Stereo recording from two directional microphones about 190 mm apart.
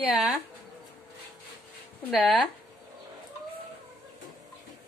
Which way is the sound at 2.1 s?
Centre (ahead or behind).